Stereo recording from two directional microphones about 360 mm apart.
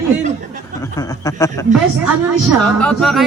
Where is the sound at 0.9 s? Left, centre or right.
Centre.